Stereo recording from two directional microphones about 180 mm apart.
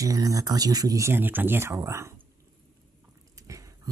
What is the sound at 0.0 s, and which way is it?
Speech, 20° right (ahead or behind).